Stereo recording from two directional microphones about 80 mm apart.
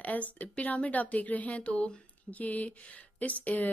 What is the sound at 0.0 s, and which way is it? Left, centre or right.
A woman's voice, centre.